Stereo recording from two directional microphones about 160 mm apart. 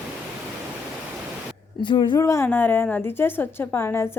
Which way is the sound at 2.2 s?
15° left (ahead or behind).